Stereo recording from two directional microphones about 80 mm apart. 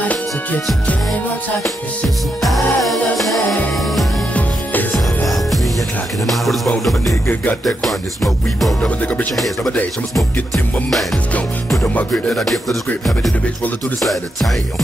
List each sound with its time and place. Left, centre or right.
2.4 s music: centre
4.9 s music: centre
8.8 s music: centre
10.1 s music: centre
11.8 s music: left
12.1 s music: centre